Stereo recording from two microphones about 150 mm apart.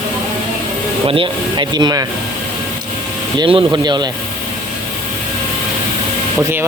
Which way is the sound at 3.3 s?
30° right (ahead or behind).